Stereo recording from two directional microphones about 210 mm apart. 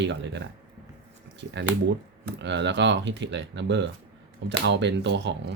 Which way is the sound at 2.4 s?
55° right (ahead or behind).